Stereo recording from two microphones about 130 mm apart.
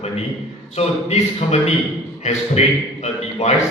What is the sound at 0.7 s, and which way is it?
A man's voice, 55° left (ahead or behind).